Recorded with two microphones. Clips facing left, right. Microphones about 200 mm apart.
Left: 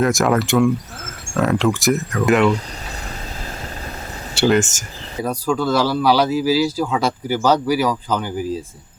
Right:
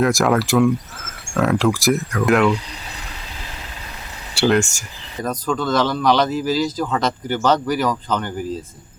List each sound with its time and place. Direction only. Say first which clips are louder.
0.0 s speech: even; centre (ahead or behind)
4.4 s speech: left 1 dB; centre (ahead or behind)